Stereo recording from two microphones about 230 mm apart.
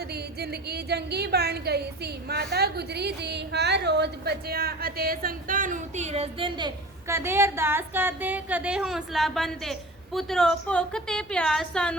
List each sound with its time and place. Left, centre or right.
0.1 s a woman's voice: right; by 11.9 s centre